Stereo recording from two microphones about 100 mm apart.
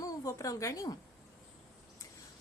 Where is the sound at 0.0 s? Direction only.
35° left (ahead or behind).